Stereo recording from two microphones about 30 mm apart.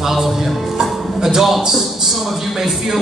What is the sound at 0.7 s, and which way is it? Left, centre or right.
A man's voice, centre.